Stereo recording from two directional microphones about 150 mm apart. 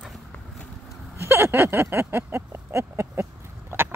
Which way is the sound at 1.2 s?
15° right (ahead or behind).